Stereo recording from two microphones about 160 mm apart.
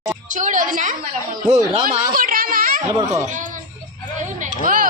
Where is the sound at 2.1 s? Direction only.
60° right (ahead or behind).